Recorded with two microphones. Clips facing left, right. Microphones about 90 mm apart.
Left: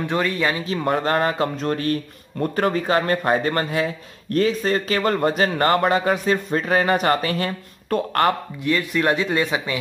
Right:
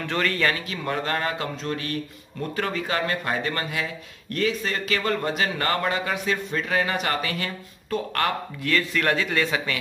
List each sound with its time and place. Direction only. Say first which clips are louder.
0.0 s speech: left 3 dB; 15° left (ahead or behind)
0.7 s a man's voice: left 6 dB; 40° left (ahead or behind)
7.9 s speech: left 5 dB; 55° left (ahead or behind)
8.6 s speech: left 3 dB; 20° left (ahead or behind)